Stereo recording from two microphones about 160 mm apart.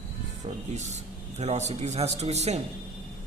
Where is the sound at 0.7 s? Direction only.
45° right (ahead or behind).